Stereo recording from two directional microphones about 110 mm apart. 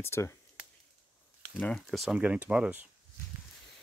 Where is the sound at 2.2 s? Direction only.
10° right (ahead or behind).